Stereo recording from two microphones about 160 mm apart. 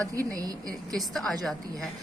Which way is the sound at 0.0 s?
20° right (ahead or behind).